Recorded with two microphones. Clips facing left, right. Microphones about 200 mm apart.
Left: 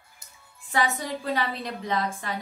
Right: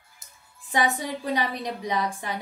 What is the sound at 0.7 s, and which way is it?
A woman's voice, 15° right (ahead or behind).